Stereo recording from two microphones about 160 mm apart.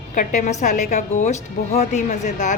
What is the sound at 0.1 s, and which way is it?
A woman's voice, 55° left (ahead or behind).